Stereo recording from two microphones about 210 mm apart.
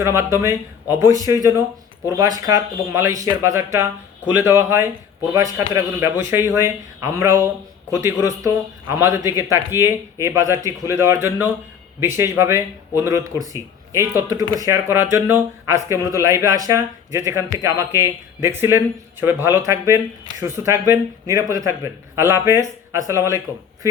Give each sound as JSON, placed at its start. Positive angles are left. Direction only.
{"t": 0.0, "sound": "speech", "side_deg": -15}